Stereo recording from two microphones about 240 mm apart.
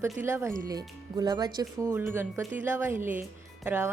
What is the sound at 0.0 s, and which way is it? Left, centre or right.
Speech, centre.